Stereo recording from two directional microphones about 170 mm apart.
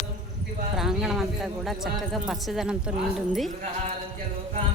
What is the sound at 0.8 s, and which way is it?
Speech, centre (ahead or behind).